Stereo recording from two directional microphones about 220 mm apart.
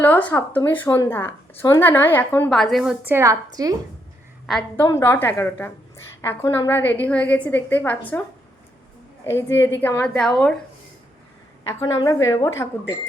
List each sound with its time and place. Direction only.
0.0 s speech: 10° left (ahead or behind); by 3.8 s 15° right (ahead or behind)
4.4 s a woman's voice: centre (ahead or behind)
4.9 s speech: 10° left (ahead or behind)
9.3 s a woman's voice: 10° left (ahead or behind)
11.7 s speech: 15° left (ahead or behind)